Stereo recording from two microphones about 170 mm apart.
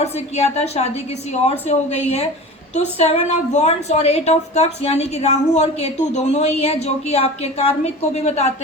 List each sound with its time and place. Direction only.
0.0 s a woman's voice: 40° left (ahead or behind)